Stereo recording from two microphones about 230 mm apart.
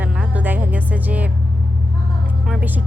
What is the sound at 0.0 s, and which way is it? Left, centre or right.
Music, centre.